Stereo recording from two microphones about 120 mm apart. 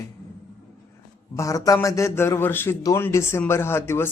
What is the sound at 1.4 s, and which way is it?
A man's voice, 30° left (ahead or behind).